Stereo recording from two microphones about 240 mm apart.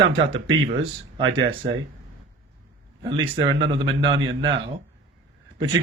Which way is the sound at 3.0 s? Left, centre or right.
Right.